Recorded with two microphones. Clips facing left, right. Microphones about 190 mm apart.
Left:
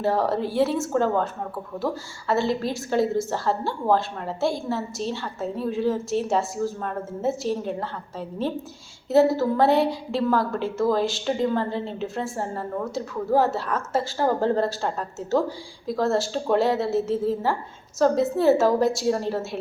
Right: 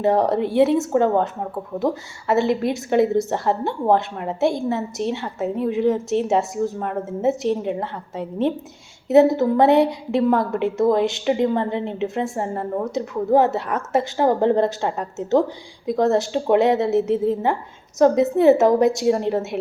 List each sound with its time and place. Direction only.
0.0 s a woman's voice: 20° right (ahead or behind)